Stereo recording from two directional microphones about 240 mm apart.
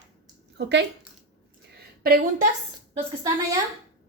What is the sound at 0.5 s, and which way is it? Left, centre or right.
Speech, right.